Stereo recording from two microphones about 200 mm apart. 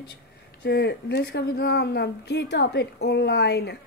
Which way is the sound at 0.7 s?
55° left (ahead or behind).